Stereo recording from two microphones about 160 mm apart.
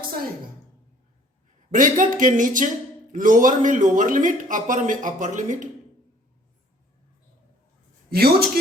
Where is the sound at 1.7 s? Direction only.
55° right (ahead or behind).